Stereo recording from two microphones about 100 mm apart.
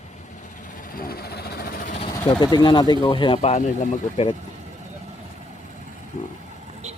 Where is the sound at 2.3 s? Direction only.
40° left (ahead or behind).